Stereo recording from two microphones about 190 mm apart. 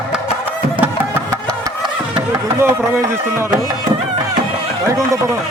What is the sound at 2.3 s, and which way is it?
Speech, 15° right (ahead or behind).